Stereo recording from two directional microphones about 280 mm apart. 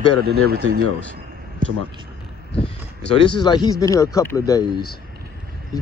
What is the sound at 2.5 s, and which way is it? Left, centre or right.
Speech, left.